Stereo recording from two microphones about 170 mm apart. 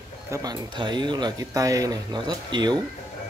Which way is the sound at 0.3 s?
20° right (ahead or behind).